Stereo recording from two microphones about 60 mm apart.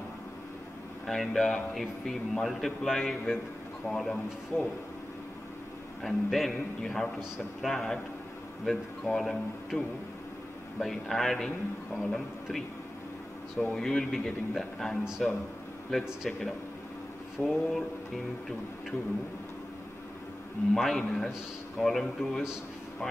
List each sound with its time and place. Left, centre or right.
1.0 s a man's voice: centre
4.5 s speech: left
6.0 s a man's voice: centre
13.7 s a man's voice: centre
20.7 s a man's voice: centre